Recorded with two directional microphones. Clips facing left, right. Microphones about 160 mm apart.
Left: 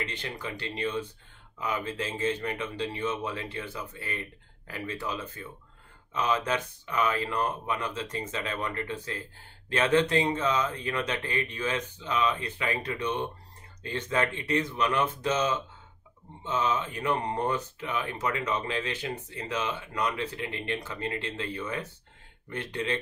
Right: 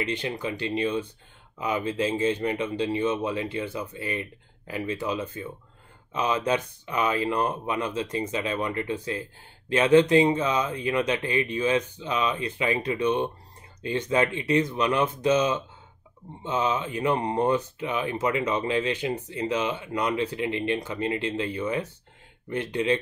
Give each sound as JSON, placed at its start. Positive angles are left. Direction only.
{"t": 0.0, "sound": "speech", "side_deg": -15}